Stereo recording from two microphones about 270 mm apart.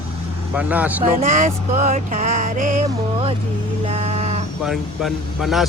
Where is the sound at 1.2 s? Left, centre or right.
Right.